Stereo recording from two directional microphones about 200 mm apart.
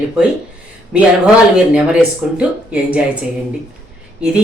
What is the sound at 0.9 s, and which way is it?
Speech, 5° right (ahead or behind).